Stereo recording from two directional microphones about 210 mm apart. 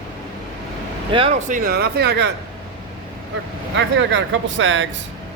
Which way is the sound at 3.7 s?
60° right (ahead or behind).